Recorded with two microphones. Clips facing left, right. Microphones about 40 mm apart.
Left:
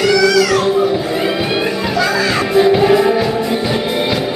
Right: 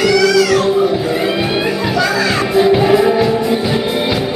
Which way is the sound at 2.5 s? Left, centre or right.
Centre.